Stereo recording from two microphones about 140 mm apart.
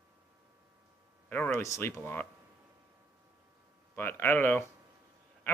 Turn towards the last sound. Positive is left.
turn(degrees=15)  # may be behind; listen again after turning